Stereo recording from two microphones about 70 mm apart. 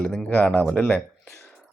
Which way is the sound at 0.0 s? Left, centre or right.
Centre.